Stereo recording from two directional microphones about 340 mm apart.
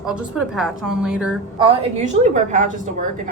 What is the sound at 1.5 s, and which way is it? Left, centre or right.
A woman's voice, centre.